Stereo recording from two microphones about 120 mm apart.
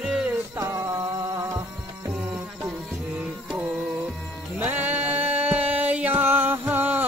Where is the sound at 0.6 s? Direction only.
30° right (ahead or behind).